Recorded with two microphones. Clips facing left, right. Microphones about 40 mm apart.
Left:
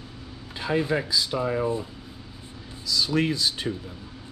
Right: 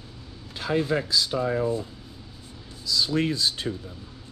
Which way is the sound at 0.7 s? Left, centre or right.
Centre.